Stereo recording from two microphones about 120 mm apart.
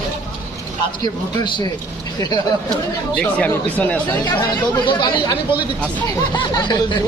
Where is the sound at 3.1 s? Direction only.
10° left (ahead or behind).